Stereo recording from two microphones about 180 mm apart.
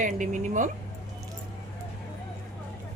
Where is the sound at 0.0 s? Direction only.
45° right (ahead or behind).